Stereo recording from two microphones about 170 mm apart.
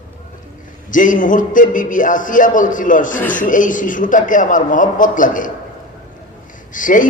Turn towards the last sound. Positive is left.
turn(degrees=50)  # may be behind; listen again after turning